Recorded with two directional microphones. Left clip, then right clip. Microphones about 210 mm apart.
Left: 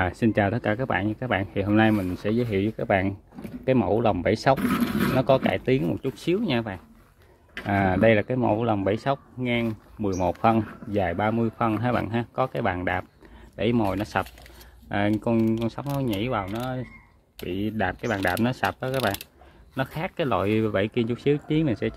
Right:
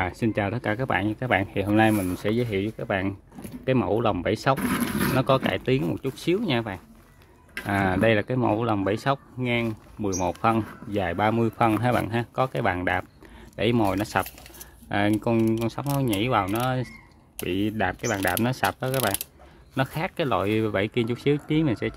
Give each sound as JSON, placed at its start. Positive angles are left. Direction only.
{"t": 0.0, "sound": "speech", "side_deg": 5}
{"t": 16.5, "sound": "speech", "side_deg": -25}
{"t": 17.4, "sound": "speech", "side_deg": -10}